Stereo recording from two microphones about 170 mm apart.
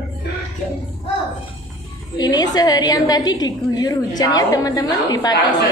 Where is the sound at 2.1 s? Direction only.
25° left (ahead or behind).